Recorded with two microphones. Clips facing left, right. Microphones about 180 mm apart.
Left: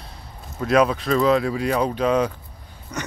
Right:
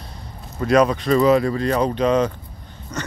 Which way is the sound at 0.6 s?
Centre (ahead or behind).